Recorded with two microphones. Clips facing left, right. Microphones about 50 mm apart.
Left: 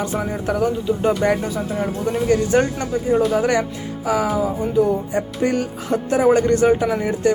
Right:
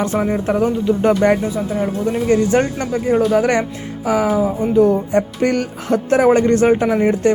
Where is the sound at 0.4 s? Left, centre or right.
Right.